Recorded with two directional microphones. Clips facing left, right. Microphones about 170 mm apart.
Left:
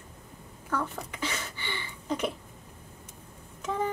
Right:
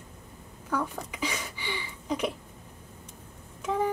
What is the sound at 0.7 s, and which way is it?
Speech, 10° right (ahead or behind).